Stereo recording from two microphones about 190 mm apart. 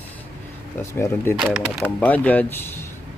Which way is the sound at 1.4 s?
Centre (ahead or behind).